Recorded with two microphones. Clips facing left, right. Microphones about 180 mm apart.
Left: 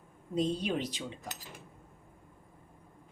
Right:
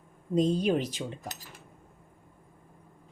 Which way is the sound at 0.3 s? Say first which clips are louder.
Right 6 dB; 45° right (ahead or behind).